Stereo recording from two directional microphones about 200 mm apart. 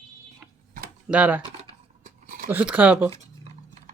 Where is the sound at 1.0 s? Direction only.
5° right (ahead or behind).